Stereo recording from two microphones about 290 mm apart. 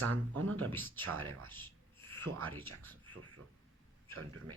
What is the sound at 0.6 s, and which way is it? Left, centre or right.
Speech, centre.